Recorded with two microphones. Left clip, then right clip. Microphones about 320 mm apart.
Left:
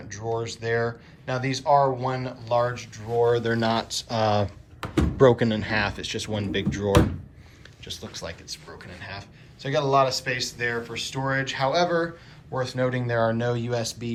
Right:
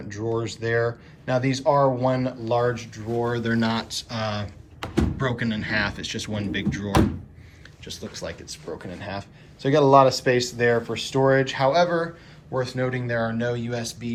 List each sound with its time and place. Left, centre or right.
0.1 s speech: centre